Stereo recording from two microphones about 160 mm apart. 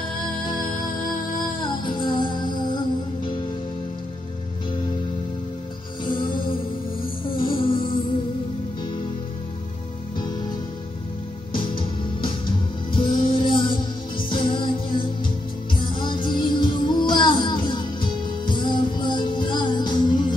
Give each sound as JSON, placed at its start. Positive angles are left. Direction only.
{"t": 1.6, "sound": "music", "side_deg": 30}
{"t": 7.3, "sound": "music", "side_deg": 30}
{"t": 11.5, "sound": "music", "side_deg": 30}